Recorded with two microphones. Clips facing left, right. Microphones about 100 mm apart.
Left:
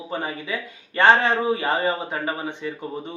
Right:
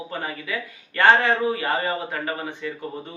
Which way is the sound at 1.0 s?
20° left (ahead or behind).